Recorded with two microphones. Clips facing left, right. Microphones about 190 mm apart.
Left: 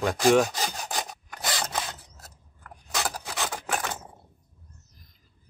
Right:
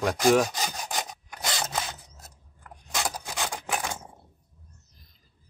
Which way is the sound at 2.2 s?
15° right (ahead or behind).